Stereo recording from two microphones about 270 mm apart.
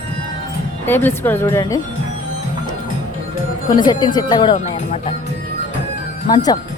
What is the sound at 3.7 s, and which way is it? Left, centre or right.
A woman's voice, centre.